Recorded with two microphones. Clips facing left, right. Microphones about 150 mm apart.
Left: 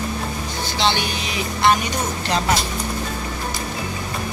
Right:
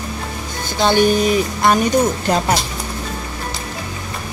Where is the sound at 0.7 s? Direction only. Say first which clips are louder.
Right 9 dB; 45° right (ahead or behind).